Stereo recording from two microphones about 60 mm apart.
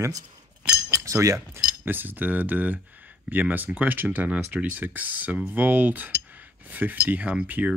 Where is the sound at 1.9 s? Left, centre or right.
Right.